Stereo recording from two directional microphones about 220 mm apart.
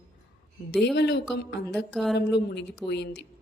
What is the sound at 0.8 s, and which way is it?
Speech, 50° left (ahead or behind).